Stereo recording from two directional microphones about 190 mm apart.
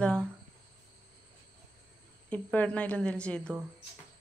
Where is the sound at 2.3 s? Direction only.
5° left (ahead or behind).